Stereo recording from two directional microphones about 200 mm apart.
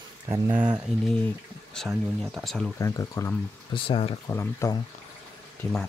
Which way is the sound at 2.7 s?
15° left (ahead or behind).